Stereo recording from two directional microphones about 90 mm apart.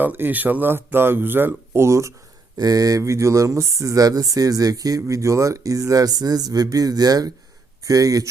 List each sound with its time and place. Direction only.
0.0 s speech: 20° right (ahead or behind); by 8.3 s 40° right (ahead or behind)